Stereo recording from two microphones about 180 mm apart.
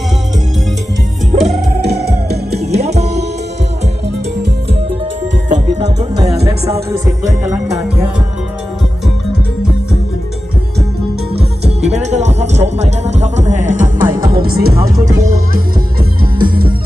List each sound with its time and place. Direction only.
1.4 s music: centre (ahead or behind)
2.3 s music: 35° right (ahead or behind)
2.7 s music: 65° right (ahead or behind)
5.5 s music: 40° right (ahead or behind)
6.7 s music: 20° right (ahead or behind)
11.6 s music: 35° right (ahead or behind); by 14.8 s 55° right (ahead or behind)
14.8 s music: 20° right (ahead or behind)